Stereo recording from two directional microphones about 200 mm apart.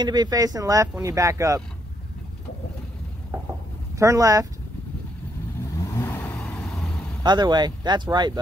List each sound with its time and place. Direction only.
0.0 s speech: 20° right (ahead or behind)
3.9 s speech: 15° right (ahead or behind)
5.9 s vehicle: 10° left (ahead or behind)
7.2 s speech: 20° right (ahead or behind)